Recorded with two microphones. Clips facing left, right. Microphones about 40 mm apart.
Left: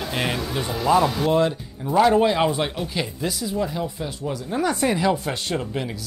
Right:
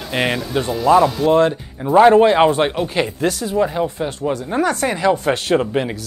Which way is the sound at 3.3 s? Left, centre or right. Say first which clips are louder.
Right 6 dB; right.